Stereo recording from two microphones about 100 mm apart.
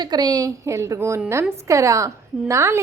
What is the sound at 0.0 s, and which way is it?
A woman's voice, 45° right (ahead or behind).